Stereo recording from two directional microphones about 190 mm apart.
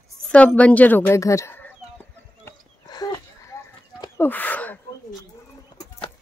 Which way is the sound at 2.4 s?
20° left (ahead or behind).